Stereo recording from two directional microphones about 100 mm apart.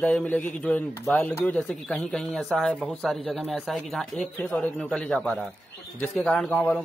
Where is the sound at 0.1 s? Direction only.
10° left (ahead or behind).